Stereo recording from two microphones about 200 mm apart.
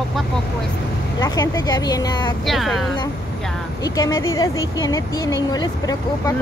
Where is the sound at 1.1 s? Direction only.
20° left (ahead or behind).